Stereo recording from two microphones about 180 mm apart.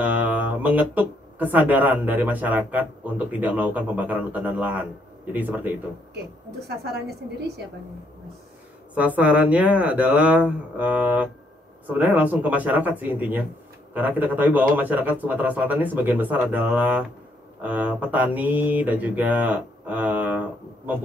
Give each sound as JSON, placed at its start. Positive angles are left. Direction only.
{"t": 0.0, "sound": "speech", "side_deg": -10}
{"t": 6.8, "sound": "a woman's voice", "side_deg": -65}
{"t": 8.9, "sound": "speech", "side_deg": -10}